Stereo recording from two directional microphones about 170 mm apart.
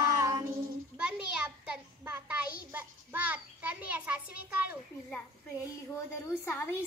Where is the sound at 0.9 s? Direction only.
5° right (ahead or behind).